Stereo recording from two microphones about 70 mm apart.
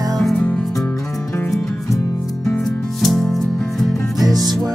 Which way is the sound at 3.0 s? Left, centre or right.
Centre.